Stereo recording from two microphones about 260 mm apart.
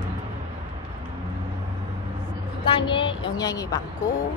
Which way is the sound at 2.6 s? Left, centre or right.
Centre.